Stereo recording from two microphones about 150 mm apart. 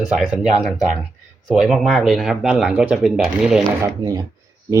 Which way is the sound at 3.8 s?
25° right (ahead or behind).